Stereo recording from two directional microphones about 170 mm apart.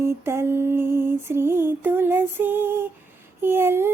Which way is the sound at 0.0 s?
15° right (ahead or behind).